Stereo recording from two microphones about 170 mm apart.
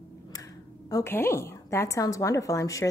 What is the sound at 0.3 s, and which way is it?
A woman's voice, 20° left (ahead or behind).